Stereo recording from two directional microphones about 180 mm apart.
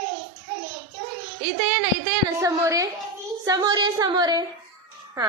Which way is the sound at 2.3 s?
15° right (ahead or behind).